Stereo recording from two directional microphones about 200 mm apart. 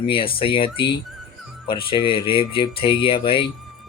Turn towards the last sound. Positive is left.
turn(degrees=25)  # may be behind; listen again after turning